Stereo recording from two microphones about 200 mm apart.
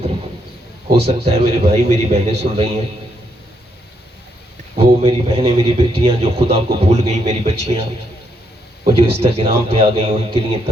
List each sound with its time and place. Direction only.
0.9 s speech: 30° right (ahead or behind)
4.8 s speech: 30° right (ahead or behind)